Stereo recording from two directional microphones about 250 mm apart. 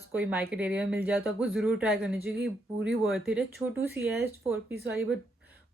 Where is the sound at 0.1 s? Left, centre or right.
Centre.